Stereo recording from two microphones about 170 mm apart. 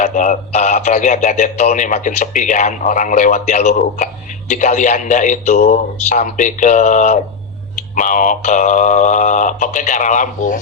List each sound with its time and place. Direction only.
0.0 s speech: 50° left (ahead or behind)